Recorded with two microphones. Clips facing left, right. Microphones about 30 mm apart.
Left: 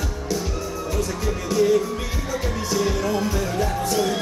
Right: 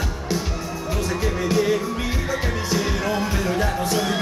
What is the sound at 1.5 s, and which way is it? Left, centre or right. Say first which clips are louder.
Music: left 4 dB; right.